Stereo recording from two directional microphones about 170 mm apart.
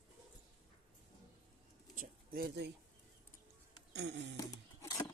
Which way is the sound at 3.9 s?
90° right.